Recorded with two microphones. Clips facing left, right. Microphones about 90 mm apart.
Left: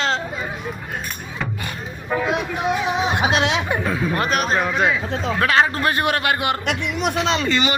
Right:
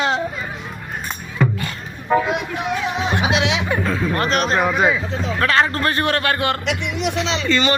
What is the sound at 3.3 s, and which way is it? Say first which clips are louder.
Speech: even; 45° left (ahead or behind).